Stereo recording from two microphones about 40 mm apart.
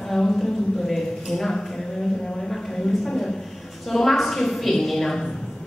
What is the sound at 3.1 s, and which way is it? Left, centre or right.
A woman's voice, centre.